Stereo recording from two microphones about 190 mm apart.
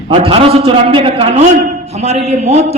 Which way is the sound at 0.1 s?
30° right (ahead or behind).